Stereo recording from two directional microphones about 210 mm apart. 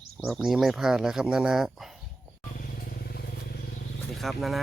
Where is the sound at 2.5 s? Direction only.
50° left (ahead or behind).